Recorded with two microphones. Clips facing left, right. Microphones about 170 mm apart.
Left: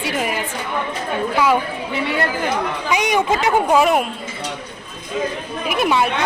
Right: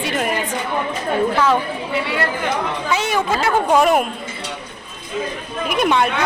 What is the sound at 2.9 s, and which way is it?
Speech, 15° left (ahead or behind).